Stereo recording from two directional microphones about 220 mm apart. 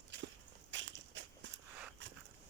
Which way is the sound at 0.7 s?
55° right (ahead or behind).